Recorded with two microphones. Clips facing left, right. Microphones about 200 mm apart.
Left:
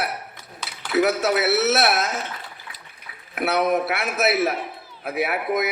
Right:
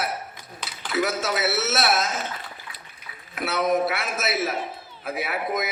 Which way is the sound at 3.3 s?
60° left (ahead or behind).